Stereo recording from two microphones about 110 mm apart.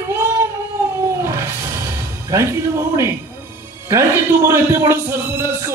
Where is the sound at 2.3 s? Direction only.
30° right (ahead or behind).